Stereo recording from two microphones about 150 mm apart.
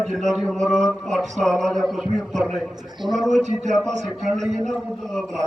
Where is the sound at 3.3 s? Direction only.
50° right (ahead or behind).